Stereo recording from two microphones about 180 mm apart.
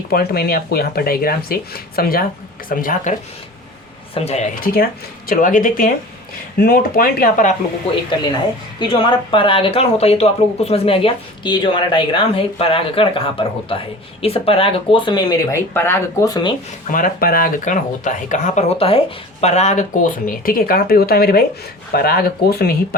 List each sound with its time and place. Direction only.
0.1 s speech: 60° left (ahead or behind)
8.8 s speech: 25° left (ahead or behind)
16.8 s speech: 50° left (ahead or behind)